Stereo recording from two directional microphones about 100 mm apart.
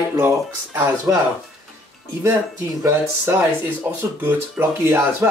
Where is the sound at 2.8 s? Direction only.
30° right (ahead or behind).